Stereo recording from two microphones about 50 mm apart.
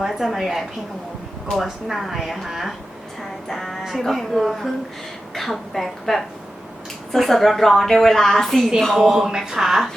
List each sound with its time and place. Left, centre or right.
0.0 s a woman's voice: centre